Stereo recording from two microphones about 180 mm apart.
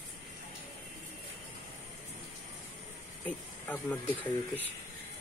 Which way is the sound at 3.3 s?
10° left (ahead or behind).